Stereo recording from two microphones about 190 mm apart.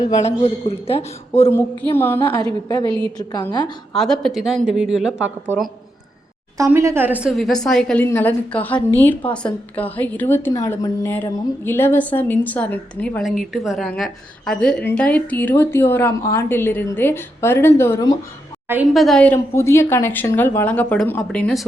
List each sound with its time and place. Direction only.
0.2 s speech: 35° left (ahead or behind)
1.5 s a woman's voice: 10° left (ahead or behind)
2.6 s a woman's voice: 25° left (ahead or behind)
3.9 s a woman's voice: centre (ahead or behind)
6.6 s a woman's voice: 15° right (ahead or behind); by 18.2 s 15° left (ahead or behind)
18.7 s a woman's voice: 5° right (ahead or behind)